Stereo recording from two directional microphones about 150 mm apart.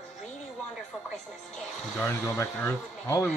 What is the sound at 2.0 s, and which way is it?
Speech, 15° left (ahead or behind).